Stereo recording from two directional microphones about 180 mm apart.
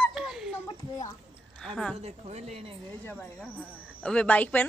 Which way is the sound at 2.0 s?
35° right (ahead or behind).